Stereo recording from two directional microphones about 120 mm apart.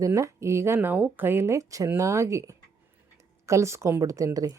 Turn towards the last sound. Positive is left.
turn(degrees=-30)  # may be behind; listen again after turning